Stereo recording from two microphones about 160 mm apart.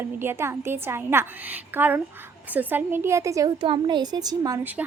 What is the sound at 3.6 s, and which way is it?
Speech, 30° right (ahead or behind).